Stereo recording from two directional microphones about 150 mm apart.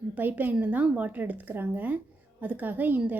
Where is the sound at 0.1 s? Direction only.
10° right (ahead or behind).